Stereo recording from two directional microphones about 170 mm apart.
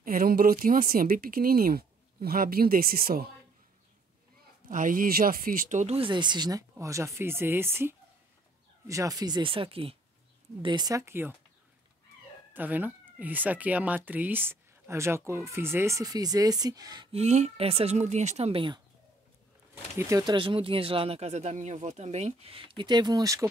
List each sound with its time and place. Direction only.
0.0 s speech: 55° right (ahead or behind)
4.6 s speech: 50° right (ahead or behind); by 11.3 s 15° right (ahead or behind)
12.5 s speech: 10° right (ahead or behind)
17.1 s speech: 40° right (ahead or behind)
20.0 s speech: 20° right (ahead or behind)